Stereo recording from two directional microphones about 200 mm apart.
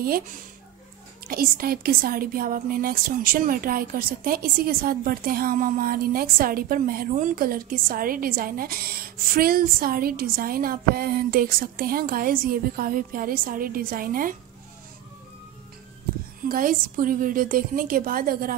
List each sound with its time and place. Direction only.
1.2 s a woman's voice: 45° right (ahead or behind)
16.4 s a woman's voice: 45° right (ahead or behind)